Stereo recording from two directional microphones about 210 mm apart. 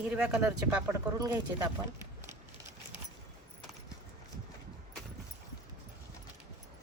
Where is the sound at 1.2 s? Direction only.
15° right (ahead or behind).